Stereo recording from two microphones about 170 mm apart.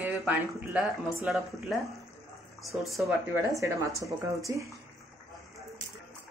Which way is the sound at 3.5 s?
20° right (ahead or behind).